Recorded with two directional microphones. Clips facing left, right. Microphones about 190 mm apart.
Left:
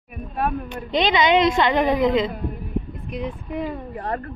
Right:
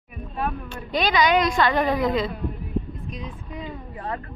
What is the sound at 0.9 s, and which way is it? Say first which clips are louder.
A woman's voice: left 2 dB; 20° left (ahead or behind).